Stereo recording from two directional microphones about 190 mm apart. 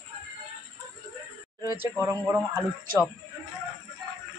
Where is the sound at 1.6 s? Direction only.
15° right (ahead or behind).